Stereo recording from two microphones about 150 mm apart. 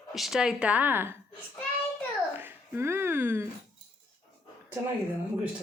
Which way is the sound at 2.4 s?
15° right (ahead or behind).